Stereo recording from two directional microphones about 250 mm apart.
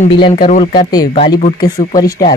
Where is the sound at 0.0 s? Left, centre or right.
Left.